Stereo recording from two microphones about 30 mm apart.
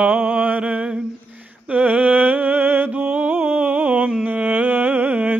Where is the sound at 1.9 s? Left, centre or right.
Right.